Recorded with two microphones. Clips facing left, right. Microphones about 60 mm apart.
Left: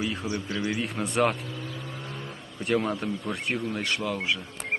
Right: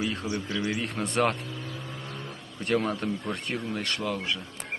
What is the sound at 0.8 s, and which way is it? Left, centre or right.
Speech, centre.